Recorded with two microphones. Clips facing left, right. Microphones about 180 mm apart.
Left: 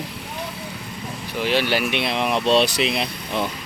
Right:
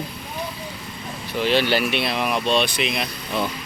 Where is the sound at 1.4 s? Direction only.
10° left (ahead or behind); by 3.4 s 30° left (ahead or behind).